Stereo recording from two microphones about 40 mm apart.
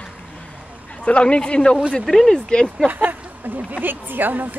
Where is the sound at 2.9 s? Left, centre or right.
Right.